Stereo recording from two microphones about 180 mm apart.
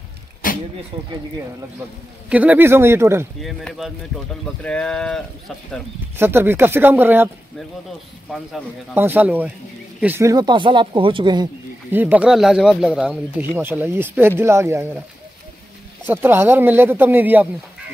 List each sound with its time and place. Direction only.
0.4 s a sound: 50° left (ahead or behind)
2.2 s speech: 10° right (ahead or behind)
3.3 s speech: centre (ahead or behind)
6.1 s speech: 10° right (ahead or behind)
8.9 s speech: 10° right (ahead or behind); by 11.4 s 25° right (ahead or behind)
11.9 s speech: 10° right (ahead or behind)
16.1 s speech: 10° right (ahead or behind)